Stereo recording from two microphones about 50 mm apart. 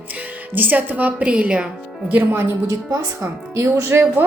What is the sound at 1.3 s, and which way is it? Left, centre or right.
Speech, right.